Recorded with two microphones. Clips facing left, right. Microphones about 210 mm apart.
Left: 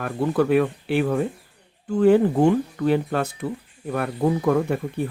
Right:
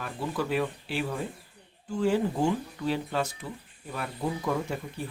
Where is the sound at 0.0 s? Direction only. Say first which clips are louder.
Left 10 dB; 60° left (ahead or behind).